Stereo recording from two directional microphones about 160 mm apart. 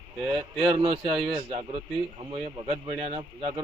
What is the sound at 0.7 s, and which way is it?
A man's voice, 35° right (ahead or behind).